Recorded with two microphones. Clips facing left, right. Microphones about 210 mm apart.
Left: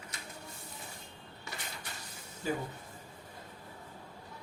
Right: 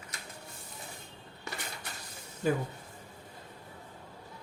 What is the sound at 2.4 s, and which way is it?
Speech, 60° right (ahead or behind).